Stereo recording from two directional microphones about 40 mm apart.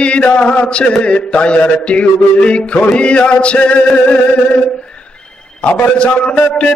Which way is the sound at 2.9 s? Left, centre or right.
Left.